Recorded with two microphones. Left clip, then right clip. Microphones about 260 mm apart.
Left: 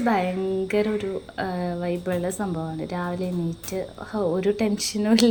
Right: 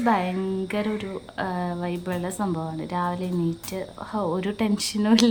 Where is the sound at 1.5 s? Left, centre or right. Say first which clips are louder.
Even; right.